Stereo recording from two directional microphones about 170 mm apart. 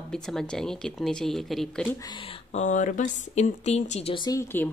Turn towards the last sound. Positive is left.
turn(degrees=20)  # may be behind; listen again after turning